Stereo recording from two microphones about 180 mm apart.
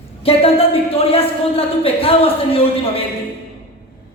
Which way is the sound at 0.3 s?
30° left (ahead or behind).